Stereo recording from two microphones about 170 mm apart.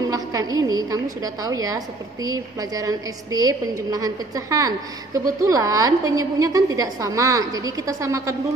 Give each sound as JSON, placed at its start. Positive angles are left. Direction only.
{"t": 0.1, "sound": "a woman's voice", "side_deg": -20}